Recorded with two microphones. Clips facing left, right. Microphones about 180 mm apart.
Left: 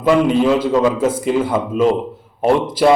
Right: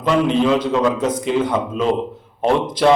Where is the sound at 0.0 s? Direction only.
5° left (ahead or behind).